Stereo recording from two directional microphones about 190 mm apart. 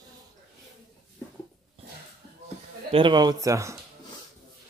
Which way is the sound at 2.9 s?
25° right (ahead or behind).